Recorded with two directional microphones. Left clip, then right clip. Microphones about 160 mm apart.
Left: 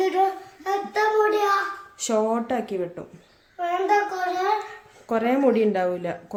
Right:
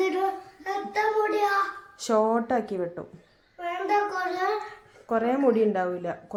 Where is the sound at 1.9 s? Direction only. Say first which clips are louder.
Even; centre (ahead or behind).